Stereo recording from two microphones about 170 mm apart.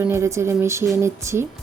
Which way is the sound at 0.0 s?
15° right (ahead or behind).